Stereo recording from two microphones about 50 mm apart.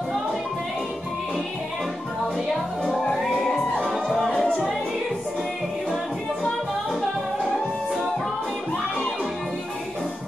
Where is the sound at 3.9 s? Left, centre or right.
Centre.